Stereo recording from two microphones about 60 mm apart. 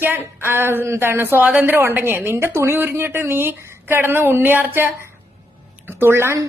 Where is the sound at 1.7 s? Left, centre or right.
Right.